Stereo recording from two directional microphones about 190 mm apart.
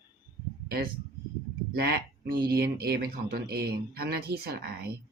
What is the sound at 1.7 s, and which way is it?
Speech, 55° right (ahead or behind).